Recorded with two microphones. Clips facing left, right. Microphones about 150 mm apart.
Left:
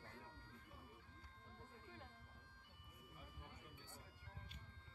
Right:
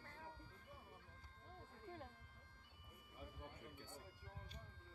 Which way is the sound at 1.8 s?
45° right (ahead or behind).